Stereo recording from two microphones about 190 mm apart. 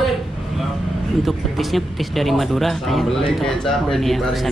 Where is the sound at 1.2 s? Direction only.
Centre (ahead or behind).